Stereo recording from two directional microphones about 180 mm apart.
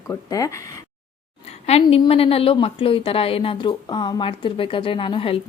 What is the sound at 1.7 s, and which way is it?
A woman's voice, 35° left (ahead or behind).